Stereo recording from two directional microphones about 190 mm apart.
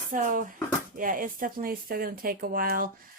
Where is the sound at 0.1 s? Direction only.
45° right (ahead or behind).